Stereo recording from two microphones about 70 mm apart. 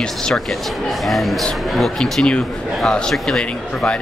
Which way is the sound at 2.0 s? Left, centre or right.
Centre.